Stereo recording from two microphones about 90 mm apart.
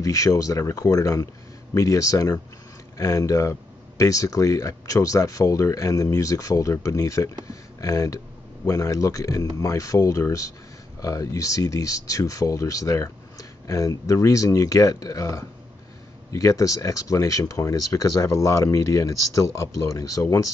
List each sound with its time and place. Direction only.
0.0 s speech: 40° left (ahead or behind)